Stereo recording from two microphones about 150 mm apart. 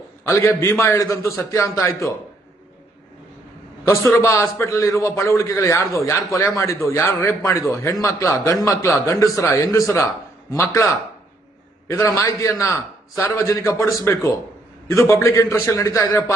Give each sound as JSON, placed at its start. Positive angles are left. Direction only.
{"t": 0.3, "sound": "a man's voice", "side_deg": 20}
{"t": 3.8, "sound": "a man's voice", "side_deg": 15}
{"t": 11.9, "sound": "a man's voice", "side_deg": 20}